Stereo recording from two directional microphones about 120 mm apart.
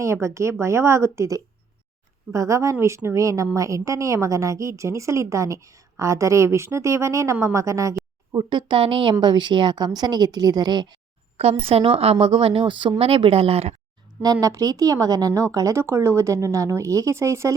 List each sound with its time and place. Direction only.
0.0 s a woman's voice: 25° right (ahead or behind)
8.4 s a woman's voice: 40° right (ahead or behind)
11.3 s a woman's voice: 55° right (ahead or behind)
14.4 s a woman's voice: 30° right (ahead or behind)